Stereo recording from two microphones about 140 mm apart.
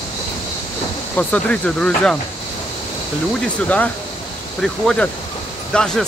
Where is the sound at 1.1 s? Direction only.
10° left (ahead or behind).